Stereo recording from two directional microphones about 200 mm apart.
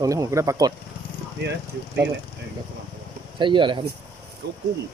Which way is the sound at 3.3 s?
25° right (ahead or behind).